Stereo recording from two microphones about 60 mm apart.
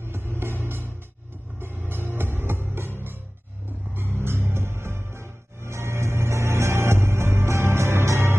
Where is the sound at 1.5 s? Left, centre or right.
Right.